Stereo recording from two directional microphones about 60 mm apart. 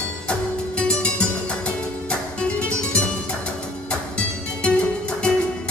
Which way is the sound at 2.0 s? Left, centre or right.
Centre.